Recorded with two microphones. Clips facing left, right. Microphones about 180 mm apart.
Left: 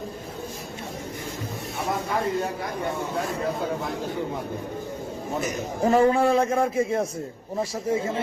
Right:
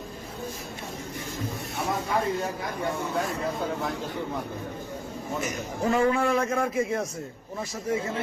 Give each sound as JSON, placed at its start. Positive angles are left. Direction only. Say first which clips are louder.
{"t": 5.4, "sound": "a man's voice", "louder": "left 4 dB", "side_deg": 35}